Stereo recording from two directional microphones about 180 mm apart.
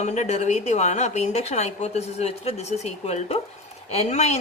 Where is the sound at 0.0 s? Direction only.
40° left (ahead or behind).